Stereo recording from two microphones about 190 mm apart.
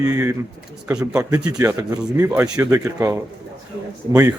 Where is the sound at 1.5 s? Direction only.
20° right (ahead or behind).